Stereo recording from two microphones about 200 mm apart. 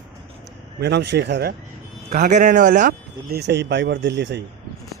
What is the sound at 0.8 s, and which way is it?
Speech, 55° right (ahead or behind).